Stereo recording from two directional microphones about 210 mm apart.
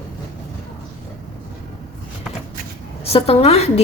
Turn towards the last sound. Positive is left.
turn(degrees=30)  # may be behind; listen again after turning